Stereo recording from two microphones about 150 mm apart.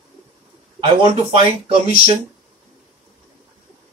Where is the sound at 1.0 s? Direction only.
40° right (ahead or behind).